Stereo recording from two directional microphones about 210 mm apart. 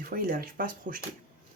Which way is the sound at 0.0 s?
45° right (ahead or behind).